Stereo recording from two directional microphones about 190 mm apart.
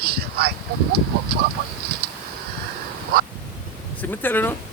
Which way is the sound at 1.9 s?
55° right (ahead or behind).